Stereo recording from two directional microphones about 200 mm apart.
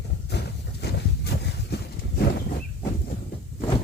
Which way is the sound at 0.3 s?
55° left (ahead or behind).